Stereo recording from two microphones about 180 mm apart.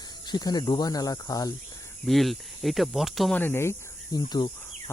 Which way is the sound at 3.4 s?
15° left (ahead or behind).